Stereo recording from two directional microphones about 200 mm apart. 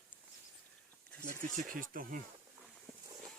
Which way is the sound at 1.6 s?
45° right (ahead or behind).